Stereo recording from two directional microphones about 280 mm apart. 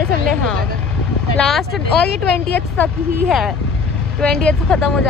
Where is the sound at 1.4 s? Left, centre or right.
Centre.